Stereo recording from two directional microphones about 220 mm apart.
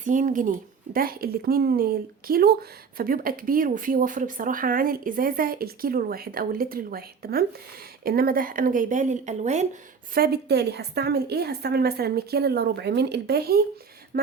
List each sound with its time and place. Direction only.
0.0 s speech: 35° right (ahead or behind)
10.2 s a woman's voice: 45° right (ahead or behind)